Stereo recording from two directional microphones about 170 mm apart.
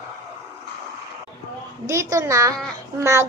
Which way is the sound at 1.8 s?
15° right (ahead or behind).